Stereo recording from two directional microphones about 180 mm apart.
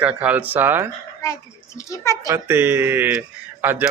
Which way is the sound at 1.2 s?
15° left (ahead or behind).